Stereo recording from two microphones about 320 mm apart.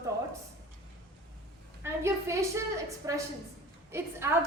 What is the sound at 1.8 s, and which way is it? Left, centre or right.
A woman's voice, centre.